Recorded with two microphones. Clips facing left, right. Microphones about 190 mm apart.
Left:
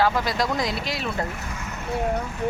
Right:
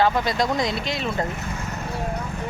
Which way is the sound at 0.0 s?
Centre (ahead or behind).